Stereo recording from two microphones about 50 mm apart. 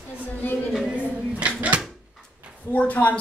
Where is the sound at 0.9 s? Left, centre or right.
Right.